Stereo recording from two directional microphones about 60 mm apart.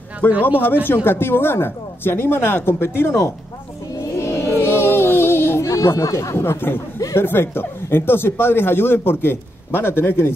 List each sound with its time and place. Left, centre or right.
0.3 s speech: right
1.0 s speech: left
4.2 s a sound: left
5.6 s a sound: left
6.0 s speech: left
6.3 s speech: left